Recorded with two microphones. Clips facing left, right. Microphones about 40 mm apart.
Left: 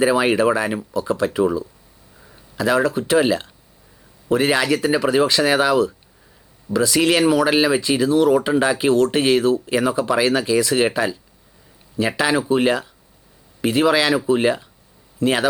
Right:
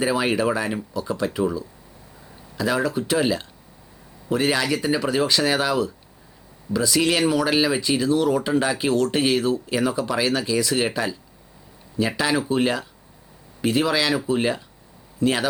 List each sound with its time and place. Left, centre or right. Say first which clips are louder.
0.0 s speech: left 5 dB; centre